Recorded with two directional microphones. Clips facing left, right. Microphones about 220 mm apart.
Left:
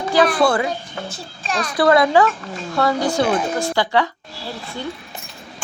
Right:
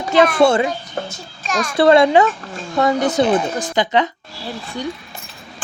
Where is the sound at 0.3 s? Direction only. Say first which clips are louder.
Right 4 dB; 25° right (ahead or behind).